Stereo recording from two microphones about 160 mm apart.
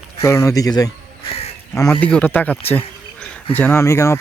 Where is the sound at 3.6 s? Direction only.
15° left (ahead or behind).